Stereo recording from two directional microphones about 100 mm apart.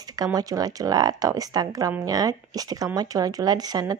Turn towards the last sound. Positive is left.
turn(degrees=-40)  # may be behind; listen again after turning